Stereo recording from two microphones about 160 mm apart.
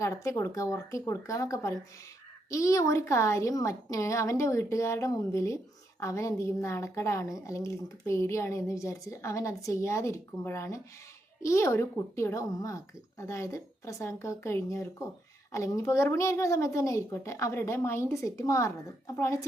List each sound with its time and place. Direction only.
0.0 s a woman's voice: 20° left (ahead or behind)